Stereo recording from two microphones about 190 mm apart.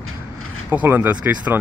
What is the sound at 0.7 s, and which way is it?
Speech, 10° right (ahead or behind).